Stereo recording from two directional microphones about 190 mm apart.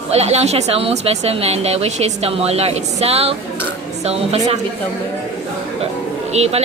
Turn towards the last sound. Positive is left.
turn(degrees=-35)  # may be behind; listen again after turning